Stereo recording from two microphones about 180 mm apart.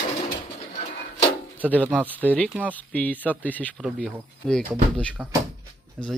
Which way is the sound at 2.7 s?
10° left (ahead or behind).